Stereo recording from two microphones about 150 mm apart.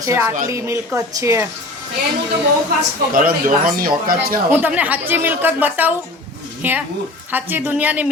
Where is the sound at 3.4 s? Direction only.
70° right (ahead or behind).